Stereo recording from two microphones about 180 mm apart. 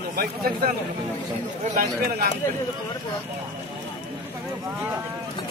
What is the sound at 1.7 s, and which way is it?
Speech, 55° right (ahead or behind).